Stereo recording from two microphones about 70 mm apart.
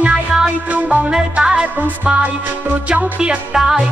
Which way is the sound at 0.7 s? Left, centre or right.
Right.